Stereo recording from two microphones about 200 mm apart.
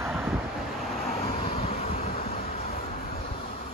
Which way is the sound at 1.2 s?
30° left (ahead or behind).